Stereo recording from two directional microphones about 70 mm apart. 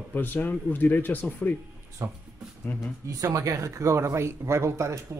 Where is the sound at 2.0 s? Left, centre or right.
Right.